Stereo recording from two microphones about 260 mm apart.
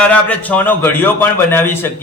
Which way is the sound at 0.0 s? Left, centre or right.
Centre.